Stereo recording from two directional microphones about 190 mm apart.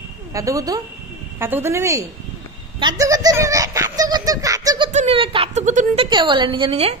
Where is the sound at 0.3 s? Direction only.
15° right (ahead or behind).